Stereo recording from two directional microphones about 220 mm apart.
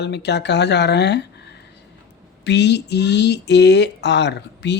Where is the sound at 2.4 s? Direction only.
50° left (ahead or behind).